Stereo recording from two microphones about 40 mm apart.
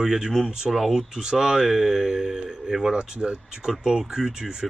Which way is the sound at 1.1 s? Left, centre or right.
Centre.